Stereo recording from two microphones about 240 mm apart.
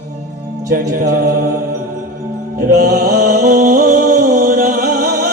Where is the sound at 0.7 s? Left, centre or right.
Right.